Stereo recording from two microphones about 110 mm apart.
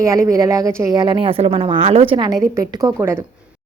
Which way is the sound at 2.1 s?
40° right (ahead or behind).